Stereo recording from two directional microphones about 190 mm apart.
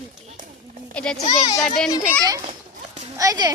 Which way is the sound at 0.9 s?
5° left (ahead or behind).